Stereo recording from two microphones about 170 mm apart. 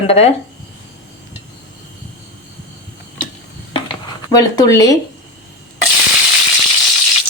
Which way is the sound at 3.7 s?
25° left (ahead or behind).